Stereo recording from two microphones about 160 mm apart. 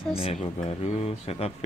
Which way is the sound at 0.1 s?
35° left (ahead or behind).